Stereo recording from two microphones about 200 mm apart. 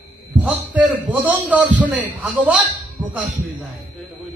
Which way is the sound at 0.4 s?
5° right (ahead or behind).